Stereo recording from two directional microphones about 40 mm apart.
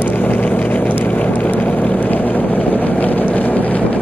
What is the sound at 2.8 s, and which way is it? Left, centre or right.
Vehicle, left.